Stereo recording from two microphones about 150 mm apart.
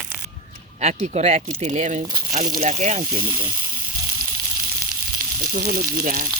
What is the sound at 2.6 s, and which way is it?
Speech, 50° right (ahead or behind).